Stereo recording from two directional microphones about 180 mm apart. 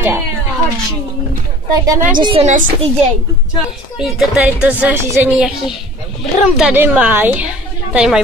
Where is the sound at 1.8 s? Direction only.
15° right (ahead or behind).